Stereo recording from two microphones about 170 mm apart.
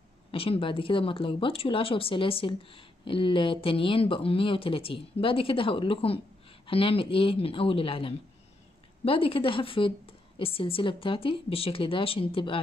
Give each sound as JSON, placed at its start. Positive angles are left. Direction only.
{"t": 0.3, "sound": "speech", "side_deg": 35}